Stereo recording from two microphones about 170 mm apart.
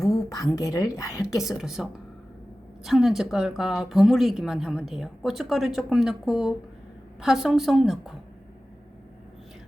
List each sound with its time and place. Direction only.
0.0 s a woman's voice: 20° left (ahead or behind)
1.5 s a woman's voice: centre (ahead or behind)